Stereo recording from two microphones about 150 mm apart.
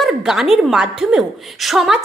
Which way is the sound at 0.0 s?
5° right (ahead or behind).